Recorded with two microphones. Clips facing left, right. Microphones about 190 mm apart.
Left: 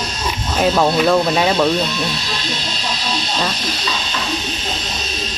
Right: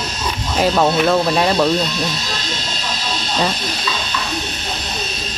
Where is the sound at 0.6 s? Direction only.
Centre (ahead or behind).